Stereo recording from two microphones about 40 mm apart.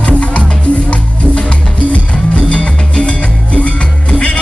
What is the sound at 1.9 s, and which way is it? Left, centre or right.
Music, left.